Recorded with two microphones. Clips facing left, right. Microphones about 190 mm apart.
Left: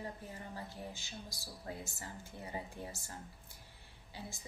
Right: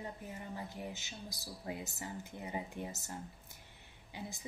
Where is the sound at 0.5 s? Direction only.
20° right (ahead or behind).